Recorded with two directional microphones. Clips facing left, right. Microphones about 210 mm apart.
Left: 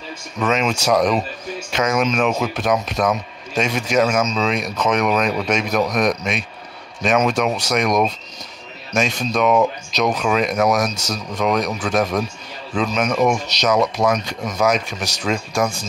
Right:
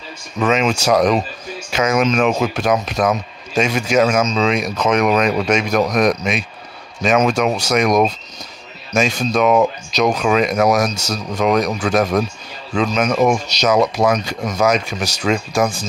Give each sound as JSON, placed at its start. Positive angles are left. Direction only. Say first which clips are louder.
{"t": 0.4, "sound": "speech", "louder": "right 3 dB", "side_deg": -5}
{"t": 14.0, "sound": "speech", "louder": "right 2 dB", "side_deg": -25}
{"t": 14.6, "sound": "speech", "louder": "right 2 dB", "side_deg": 0}